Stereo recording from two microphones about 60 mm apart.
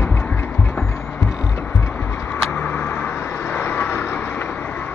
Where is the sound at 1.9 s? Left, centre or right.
Left.